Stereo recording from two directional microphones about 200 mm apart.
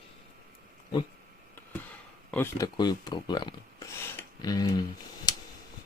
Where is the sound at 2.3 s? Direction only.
10° left (ahead or behind).